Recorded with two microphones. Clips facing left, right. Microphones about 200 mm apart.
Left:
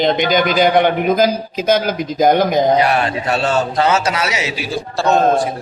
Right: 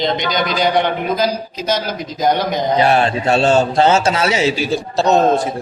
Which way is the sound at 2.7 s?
25° right (ahead or behind).